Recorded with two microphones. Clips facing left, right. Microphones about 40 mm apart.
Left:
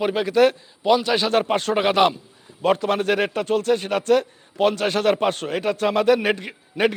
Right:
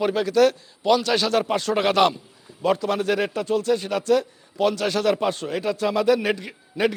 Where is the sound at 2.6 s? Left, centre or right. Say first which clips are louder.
Left 2 dB; left.